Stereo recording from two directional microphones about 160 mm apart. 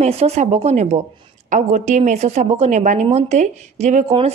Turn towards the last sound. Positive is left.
turn(degrees=-45)  # may be behind; listen again after turning